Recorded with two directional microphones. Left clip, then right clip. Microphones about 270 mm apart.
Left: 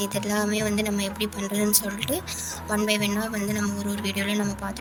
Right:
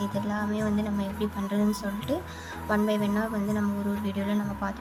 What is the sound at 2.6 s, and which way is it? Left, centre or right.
Speech, centre.